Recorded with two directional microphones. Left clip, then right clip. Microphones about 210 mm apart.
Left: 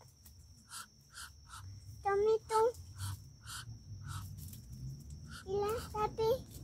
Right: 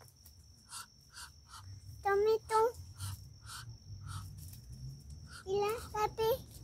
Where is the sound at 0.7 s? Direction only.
15° right (ahead or behind).